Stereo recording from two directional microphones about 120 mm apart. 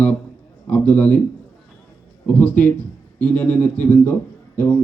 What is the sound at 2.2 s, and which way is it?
Speech, 10° left (ahead or behind).